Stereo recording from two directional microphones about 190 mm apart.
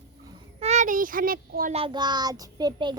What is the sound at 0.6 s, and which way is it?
Child singing, 40° right (ahead or behind).